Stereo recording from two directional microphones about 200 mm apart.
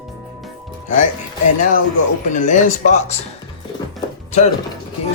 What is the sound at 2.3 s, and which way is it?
Speech, 40° left (ahead or behind).